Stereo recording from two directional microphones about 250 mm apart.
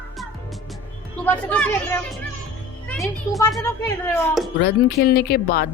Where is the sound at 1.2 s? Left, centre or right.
Centre.